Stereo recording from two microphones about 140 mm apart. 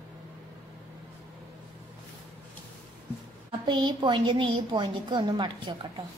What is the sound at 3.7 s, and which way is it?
A woman's voice, 35° right (ahead or behind).